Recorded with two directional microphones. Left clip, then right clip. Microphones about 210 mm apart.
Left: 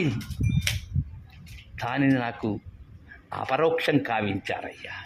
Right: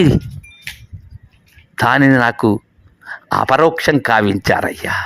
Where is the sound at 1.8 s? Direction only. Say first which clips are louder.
Right 14 dB; 35° right (ahead or behind).